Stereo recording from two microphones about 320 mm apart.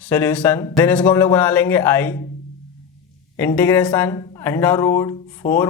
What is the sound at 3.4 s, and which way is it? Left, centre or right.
A man's voice, centre.